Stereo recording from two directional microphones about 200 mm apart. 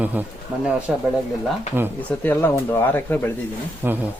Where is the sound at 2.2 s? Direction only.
10° left (ahead or behind).